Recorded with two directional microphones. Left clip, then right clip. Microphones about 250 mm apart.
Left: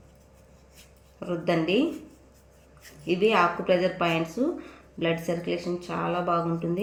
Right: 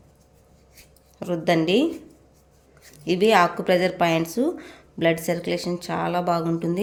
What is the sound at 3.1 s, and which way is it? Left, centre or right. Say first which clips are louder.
Speech: right 4 dB; right.